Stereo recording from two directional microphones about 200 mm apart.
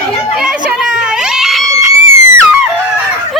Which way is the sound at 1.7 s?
15° right (ahead or behind).